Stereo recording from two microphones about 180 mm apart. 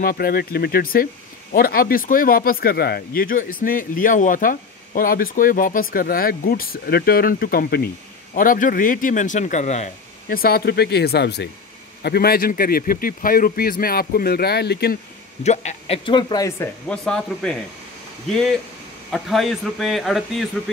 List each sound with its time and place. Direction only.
0.0 s a man's voice: 55° left (ahead or behind)
10.3 s a man's voice: 55° left (ahead or behind)
15.4 s a man's voice: 40° left (ahead or behind)
16.1 s speech: 25° left (ahead or behind); by 17.6 s 5° left (ahead or behind)
19.1 s speech: centre (ahead or behind)